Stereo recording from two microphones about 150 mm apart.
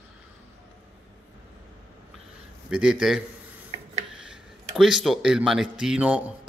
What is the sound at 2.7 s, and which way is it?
Speech, 5° right (ahead or behind).